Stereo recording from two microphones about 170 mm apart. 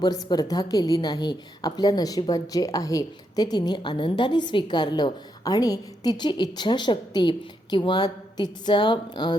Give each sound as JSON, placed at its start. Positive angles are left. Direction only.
{"t": 0.0, "sound": "a woman's voice", "side_deg": 25}